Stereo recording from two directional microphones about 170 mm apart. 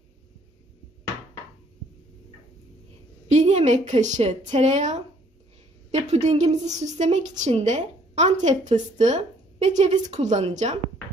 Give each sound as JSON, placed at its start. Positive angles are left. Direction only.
{"t": 3.3, "sound": "a woman's voice", "side_deg": -45}